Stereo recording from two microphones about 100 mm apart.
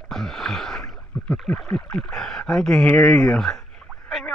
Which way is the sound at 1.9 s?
10° left (ahead or behind).